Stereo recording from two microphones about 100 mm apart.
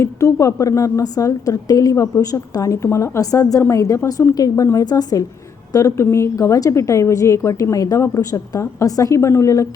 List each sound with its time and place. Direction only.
0.0 s a woman's voice: 30° left (ahead or behind)